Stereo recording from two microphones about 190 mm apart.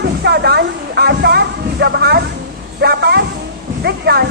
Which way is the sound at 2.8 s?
60° right (ahead or behind).